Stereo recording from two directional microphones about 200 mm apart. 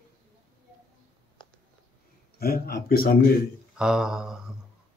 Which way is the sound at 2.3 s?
50° left (ahead or behind).